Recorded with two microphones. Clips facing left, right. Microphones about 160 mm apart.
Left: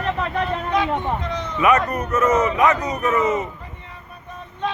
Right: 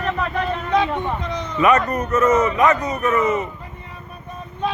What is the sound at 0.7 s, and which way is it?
Speech, 20° right (ahead or behind).